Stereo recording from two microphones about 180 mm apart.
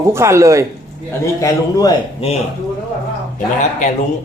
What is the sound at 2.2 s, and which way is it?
Speech, 30° left (ahead or behind).